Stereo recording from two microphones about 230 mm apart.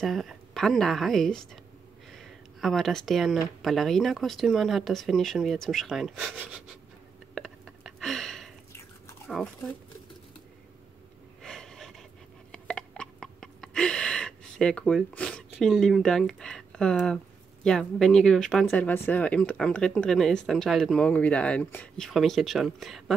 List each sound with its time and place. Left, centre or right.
0.0 s speech: centre
7.3 s a sound: centre
9.3 s speech: centre
11.4 s gasp: centre
12.4 s a sound: centre
17.6 s speech: centre